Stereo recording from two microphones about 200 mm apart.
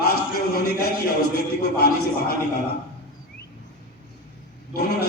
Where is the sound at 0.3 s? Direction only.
50° left (ahead or behind).